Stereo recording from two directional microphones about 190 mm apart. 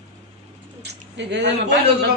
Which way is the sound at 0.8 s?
65° right (ahead or behind).